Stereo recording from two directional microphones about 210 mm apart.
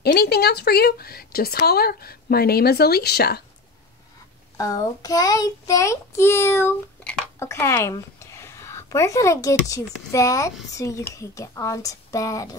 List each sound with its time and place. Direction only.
0.0 s a woman's voice: 50° left (ahead or behind)
4.6 s a child's voice: 15° left (ahead or behind)